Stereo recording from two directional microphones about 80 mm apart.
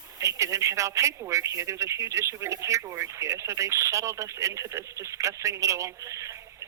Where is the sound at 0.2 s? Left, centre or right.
Right.